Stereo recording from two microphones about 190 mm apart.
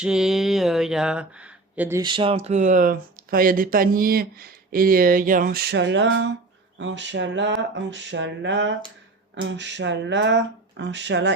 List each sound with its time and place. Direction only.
0.0 s speech: 5° right (ahead or behind)
2.0 s speech: 25° right (ahead or behind); by 11.3 s 65° right (ahead or behind)